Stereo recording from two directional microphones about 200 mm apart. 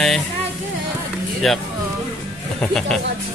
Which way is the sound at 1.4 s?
Centre (ahead or behind).